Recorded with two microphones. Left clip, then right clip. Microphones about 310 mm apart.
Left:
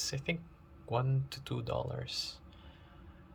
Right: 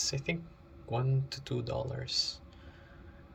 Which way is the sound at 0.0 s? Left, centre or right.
Centre.